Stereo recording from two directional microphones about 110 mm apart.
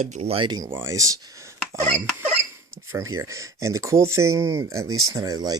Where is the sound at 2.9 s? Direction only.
30° right (ahead or behind).